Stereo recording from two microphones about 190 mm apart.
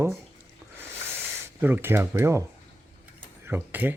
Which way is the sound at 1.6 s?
10° right (ahead or behind).